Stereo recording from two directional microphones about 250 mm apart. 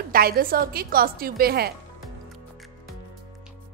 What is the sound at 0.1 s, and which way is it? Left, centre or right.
A woman's voice, right.